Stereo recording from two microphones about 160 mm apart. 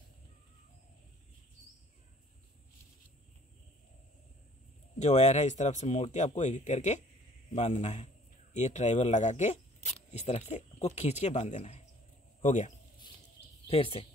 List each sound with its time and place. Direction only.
4.9 s speech: 45° left (ahead or behind)
13.7 s speech: 35° left (ahead or behind)